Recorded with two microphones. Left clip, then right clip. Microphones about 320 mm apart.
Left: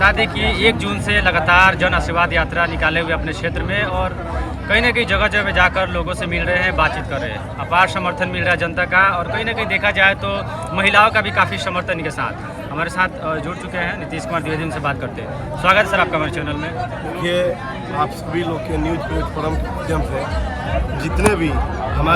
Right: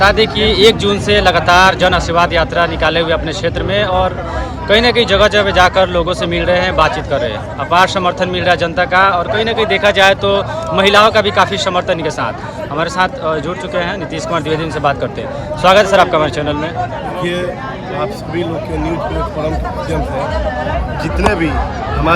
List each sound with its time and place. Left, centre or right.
0.0 s speech: centre